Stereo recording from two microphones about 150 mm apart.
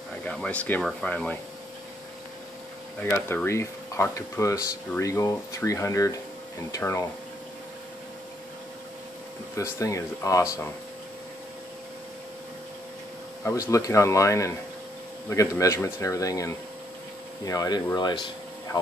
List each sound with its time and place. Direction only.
0.2 s speech: 5° left (ahead or behind)
3.0 s speech: 10° left (ahead or behind)
9.6 s speech: 20° left (ahead or behind)
13.4 s speech: 20° left (ahead or behind)